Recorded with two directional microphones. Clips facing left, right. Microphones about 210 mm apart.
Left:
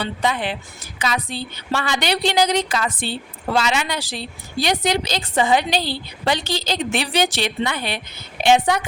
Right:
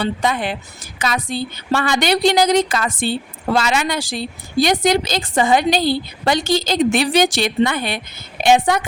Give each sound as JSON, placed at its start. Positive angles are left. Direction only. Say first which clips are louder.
{"t": 0.0, "sound": "a woman's voice", "louder": "right 3 dB", "side_deg": -45}